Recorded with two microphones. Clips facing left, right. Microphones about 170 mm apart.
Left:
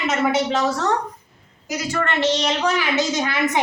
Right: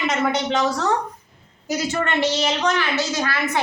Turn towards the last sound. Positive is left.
turn(degrees=20)  # may be behind; listen again after turning